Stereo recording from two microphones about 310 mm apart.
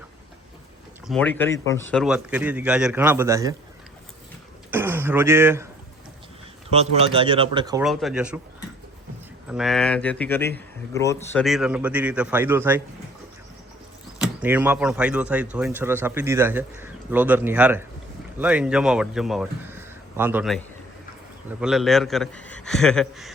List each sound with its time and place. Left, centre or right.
1.0 s speech: centre
4.7 s a sound: centre
6.7 s speech: centre
7.9 s speech: centre
9.5 s speech: centre
14.3 s speech: centre
21.6 s speech: centre